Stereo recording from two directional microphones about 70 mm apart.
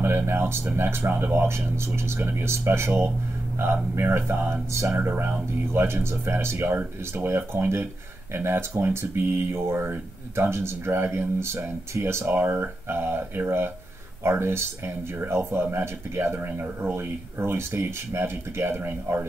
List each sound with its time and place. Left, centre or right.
0.0 s speech: right
14.2 s speech: right